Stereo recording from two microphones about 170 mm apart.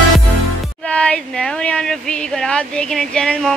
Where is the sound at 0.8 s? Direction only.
5° left (ahead or behind).